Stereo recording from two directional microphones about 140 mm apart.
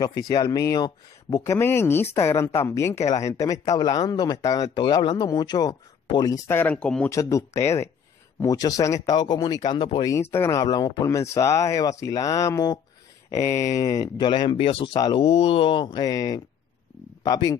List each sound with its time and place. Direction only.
0.0 s speech: 30° left (ahead or behind); by 7.1 s 10° left (ahead or behind)
7.1 s speech: 20° left (ahead or behind)
10.3 s speech: 20° left (ahead or behind)
15.2 s speech: 45° left (ahead or behind); by 17.6 s 25° left (ahead or behind)